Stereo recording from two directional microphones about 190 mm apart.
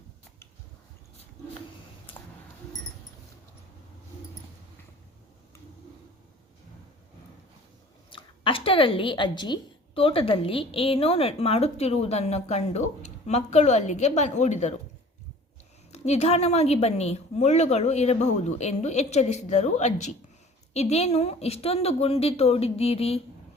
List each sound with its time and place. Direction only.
8.1 s a woman's voice: 25° left (ahead or behind)
15.9 s a woman's voice: 35° left (ahead or behind)